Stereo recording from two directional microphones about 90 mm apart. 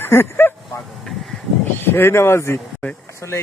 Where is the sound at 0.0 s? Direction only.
25° left (ahead or behind).